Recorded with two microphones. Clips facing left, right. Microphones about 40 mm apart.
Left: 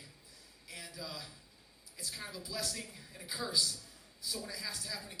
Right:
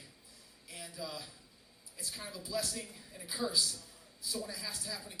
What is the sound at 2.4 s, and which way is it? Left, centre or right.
Speech, right.